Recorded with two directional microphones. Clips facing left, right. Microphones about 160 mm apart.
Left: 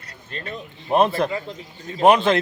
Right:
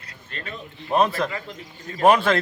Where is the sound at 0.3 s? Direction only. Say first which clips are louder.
Left 3 dB; 35° left (ahead or behind).